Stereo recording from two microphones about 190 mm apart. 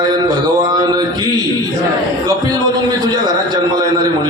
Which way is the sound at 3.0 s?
20° right (ahead or behind).